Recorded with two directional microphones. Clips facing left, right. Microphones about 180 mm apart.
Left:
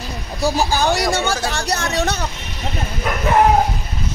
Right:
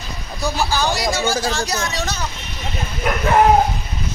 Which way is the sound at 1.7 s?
60° left (ahead or behind).